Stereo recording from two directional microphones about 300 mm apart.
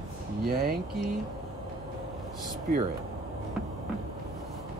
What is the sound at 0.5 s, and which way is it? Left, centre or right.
Speech, right.